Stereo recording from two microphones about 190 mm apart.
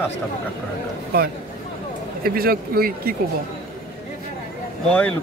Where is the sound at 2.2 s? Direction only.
50° right (ahead or behind).